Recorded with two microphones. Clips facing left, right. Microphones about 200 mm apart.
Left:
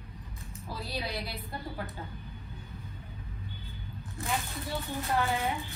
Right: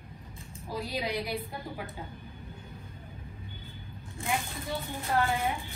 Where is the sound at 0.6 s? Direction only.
15° right (ahead or behind).